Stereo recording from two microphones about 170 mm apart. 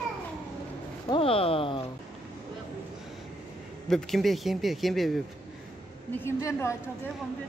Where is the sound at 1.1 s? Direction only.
35° left (ahead or behind).